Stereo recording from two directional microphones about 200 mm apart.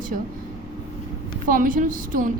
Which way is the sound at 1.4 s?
45° right (ahead or behind).